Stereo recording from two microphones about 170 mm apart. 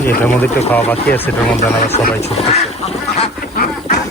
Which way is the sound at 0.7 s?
10° left (ahead or behind).